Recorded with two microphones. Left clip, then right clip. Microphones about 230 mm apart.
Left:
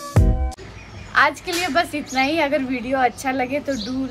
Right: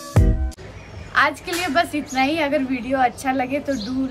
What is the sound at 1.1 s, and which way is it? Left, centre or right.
A woman's voice, centre.